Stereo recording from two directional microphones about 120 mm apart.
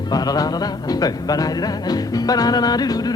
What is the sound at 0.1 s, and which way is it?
Music, 35° left (ahead or behind).